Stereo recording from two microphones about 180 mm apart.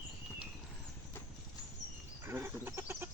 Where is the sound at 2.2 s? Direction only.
15° right (ahead or behind).